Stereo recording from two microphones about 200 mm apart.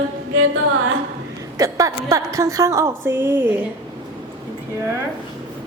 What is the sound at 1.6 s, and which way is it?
A woman's voice, 15° right (ahead or behind).